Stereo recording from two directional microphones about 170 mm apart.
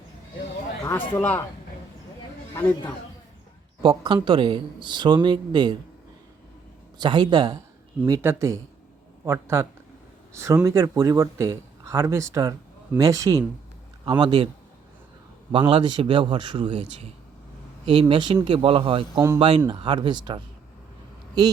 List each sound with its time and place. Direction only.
0.9 s speech: 10° left (ahead or behind)
2.6 s speech: 10° left (ahead or behind)
3.8 s speech: 25° right (ahead or behind)
7.0 s speech: 25° right (ahead or behind)
8.0 s speech: 15° right (ahead or behind)
15.5 s speech: 30° right (ahead or behind)
18.1 s speech: 25° right (ahead or behind)